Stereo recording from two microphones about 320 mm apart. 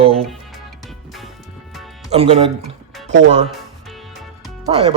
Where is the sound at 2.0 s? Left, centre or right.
Centre.